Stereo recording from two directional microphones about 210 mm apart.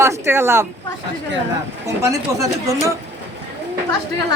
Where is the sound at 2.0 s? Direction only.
15° right (ahead or behind).